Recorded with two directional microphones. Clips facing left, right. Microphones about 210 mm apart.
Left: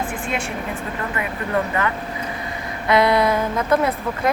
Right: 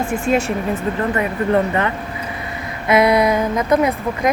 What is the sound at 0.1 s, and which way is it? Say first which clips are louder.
Speech: right 8 dB; 40° right (ahead or behind).